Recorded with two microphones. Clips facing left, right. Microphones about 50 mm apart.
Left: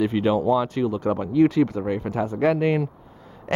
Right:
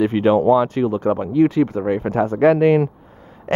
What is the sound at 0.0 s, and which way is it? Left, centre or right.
Speech, right.